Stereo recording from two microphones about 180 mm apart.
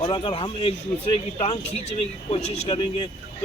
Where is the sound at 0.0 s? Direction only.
25° left (ahead or behind).